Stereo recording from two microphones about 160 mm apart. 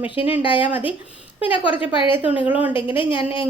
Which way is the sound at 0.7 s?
10° right (ahead or behind).